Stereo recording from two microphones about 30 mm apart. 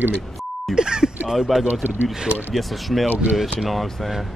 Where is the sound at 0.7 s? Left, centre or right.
Right.